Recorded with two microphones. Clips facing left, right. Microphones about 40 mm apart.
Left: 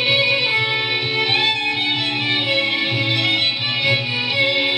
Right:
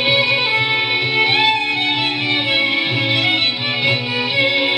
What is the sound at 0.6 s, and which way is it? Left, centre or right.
Music, right.